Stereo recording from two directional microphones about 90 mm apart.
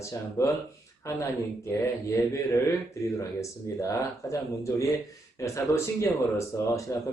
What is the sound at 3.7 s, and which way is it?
Speech, 35° left (ahead or behind).